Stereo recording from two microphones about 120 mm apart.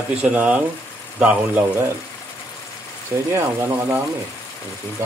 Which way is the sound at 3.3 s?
20° right (ahead or behind).